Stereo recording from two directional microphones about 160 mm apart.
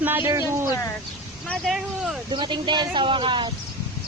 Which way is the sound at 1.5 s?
Centre (ahead or behind).